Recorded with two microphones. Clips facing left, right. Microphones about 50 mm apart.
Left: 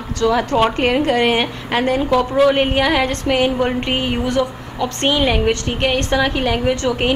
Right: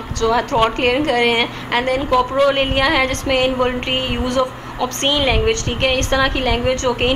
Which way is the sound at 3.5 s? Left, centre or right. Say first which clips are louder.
Even; right.